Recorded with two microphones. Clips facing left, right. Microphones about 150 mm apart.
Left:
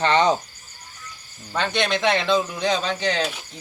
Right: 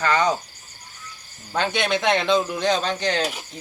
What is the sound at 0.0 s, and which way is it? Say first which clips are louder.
Speech: left 2 dB; 25° left (ahead or behind).